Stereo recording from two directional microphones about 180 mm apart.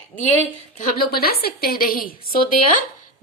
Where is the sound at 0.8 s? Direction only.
60° left (ahead or behind).